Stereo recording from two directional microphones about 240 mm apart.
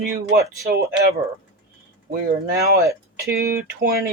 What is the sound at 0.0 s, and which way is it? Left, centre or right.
Speech, right.